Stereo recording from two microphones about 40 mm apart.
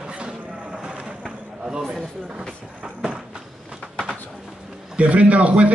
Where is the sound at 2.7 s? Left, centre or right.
Right.